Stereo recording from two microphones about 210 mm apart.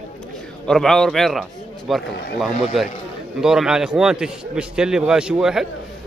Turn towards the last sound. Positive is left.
turn(degrees=-5)  # may be behind; listen again after turning